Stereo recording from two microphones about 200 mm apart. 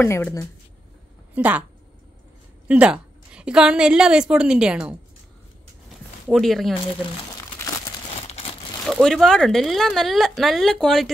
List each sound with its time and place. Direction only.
0.0 s a woman's voice: 15° left (ahead or behind)
1.3 s a woman's voice: 10° right (ahead or behind)
2.7 s speech: 5° right (ahead or behind)
6.2 s speech: centre (ahead or behind)
8.2 s a sound: 30° left (ahead or behind)
8.8 s speech: centre (ahead or behind)